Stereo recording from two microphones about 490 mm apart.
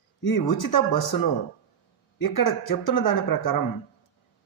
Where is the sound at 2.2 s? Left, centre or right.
Left.